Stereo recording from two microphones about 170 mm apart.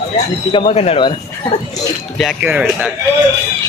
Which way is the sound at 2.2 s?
5° right (ahead or behind).